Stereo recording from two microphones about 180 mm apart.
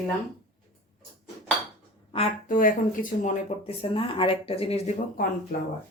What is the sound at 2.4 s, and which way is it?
Speech, 50° left (ahead or behind).